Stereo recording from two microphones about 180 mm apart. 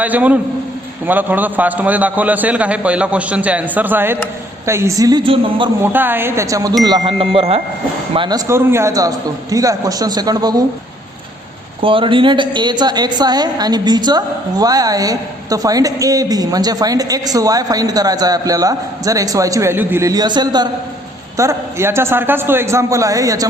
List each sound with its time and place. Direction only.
0.0 s a man's voice: 10° right (ahead or behind); by 5.7 s 30° right (ahead or behind)
5.8 s a man's voice: 10° right (ahead or behind); by 8.4 s 25° right (ahead or behind)
8.4 s a woman's voice: 15° right (ahead or behind)
11.8 s a woman's voice: 30° right (ahead or behind)